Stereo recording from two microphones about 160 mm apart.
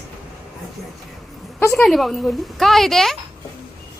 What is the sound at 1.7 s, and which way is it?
A woman's voice, 5° left (ahead or behind).